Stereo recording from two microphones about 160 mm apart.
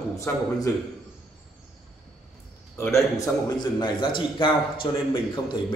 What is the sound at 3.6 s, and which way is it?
A man's voice, 30° left (ahead or behind).